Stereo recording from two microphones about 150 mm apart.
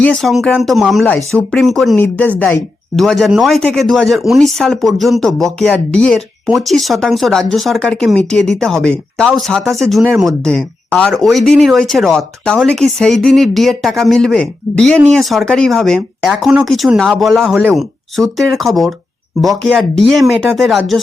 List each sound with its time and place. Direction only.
0.0 s speech: 5° left (ahead or behind)
2.0 s speech: 10° left (ahead or behind)
2.9 s speech: centre (ahead or behind)